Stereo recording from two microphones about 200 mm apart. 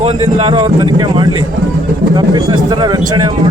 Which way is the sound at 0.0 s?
25° right (ahead or behind).